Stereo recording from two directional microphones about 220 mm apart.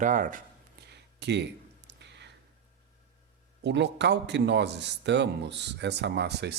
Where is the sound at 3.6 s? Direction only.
50° right (ahead or behind).